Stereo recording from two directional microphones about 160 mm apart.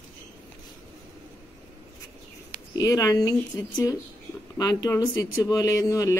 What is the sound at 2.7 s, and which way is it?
A woman's voice, 20° left (ahead or behind).